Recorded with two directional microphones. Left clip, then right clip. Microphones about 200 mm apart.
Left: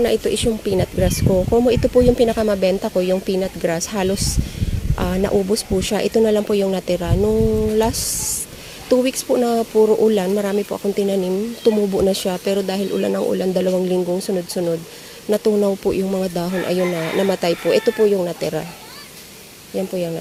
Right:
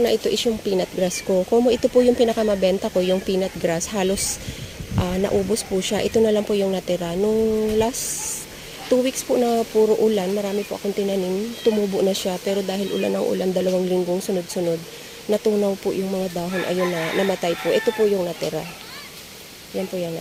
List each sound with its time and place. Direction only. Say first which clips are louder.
0.0 s speech: left 2 dB; centre (ahead or behind)
8.9 s speech: left 3 dB; 10° left (ahead or behind)